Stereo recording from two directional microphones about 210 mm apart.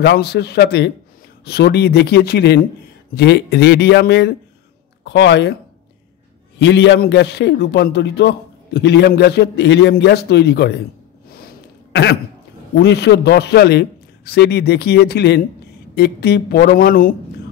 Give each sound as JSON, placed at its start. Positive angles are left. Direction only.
{"t": 0.0, "sound": "a man's voice", "side_deg": 50}
{"t": 6.6, "sound": "a man's voice", "side_deg": 55}
{"t": 11.3, "sound": "throat clearing", "side_deg": 50}
{"t": 12.7, "sound": "a man's voice", "side_deg": 50}